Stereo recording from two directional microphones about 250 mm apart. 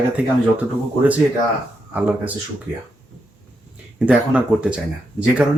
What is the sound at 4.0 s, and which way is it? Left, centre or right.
Speech, centre.